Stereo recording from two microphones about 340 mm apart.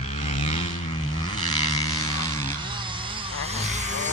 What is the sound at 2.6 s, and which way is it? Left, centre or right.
Vehicle, centre.